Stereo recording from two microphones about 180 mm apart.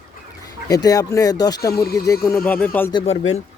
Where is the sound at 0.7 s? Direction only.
20° left (ahead or behind).